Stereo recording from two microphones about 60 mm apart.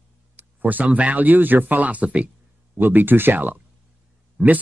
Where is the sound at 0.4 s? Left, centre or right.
Right.